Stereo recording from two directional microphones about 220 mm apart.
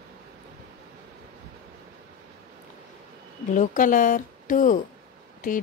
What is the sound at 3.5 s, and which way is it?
Speech, 35° left (ahead or behind).